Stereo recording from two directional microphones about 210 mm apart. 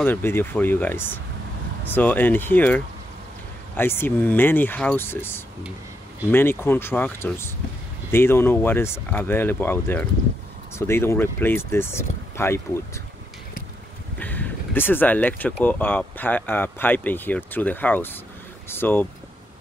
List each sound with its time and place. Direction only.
0.0 s speech: 10° left (ahead or behind)
14.2 s a sound: 10° left (ahead or behind)
15.6 s speech: 10° left (ahead or behind)